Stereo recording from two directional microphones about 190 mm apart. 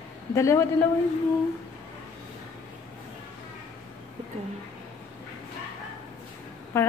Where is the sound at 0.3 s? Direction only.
15° left (ahead or behind).